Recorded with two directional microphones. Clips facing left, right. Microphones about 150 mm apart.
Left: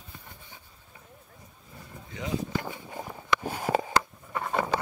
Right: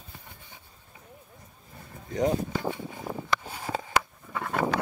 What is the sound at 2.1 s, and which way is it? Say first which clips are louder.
Speech: right 7 dB; 45° right (ahead or behind).